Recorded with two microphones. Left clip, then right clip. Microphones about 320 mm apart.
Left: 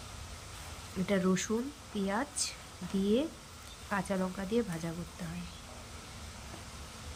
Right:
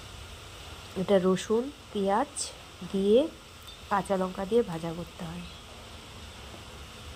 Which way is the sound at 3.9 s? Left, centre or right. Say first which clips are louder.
Right 7 dB; centre.